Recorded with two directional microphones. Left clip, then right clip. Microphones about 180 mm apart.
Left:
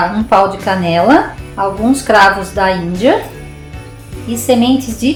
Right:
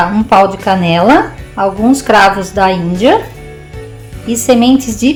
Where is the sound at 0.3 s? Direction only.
40° right (ahead or behind).